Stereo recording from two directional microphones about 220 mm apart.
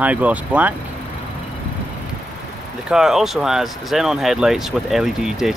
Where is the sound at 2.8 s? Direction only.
Centre (ahead or behind).